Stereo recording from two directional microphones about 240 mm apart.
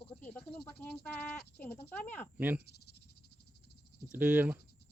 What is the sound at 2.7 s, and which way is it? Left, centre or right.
Cricket, left.